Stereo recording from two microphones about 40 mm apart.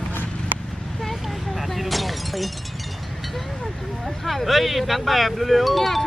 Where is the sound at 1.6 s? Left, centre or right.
Centre.